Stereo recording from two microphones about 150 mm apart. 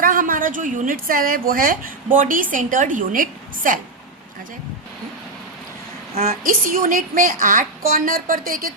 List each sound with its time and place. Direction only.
0.0 s a woman's voice: 70° right (ahead or behind)
6.4 s a woman's voice: 70° right (ahead or behind)